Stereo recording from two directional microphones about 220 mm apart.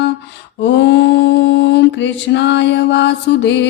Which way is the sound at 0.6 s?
50° left (ahead or behind).